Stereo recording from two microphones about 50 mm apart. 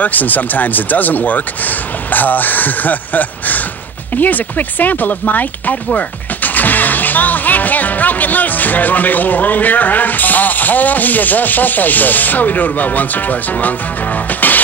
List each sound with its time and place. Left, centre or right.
0.0 s speech: left